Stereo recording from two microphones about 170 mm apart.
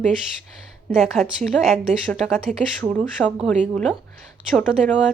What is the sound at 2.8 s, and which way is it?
Speech, 5° left (ahead or behind).